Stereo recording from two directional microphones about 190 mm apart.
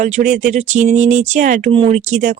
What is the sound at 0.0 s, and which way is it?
Speech, 40° right (ahead or behind).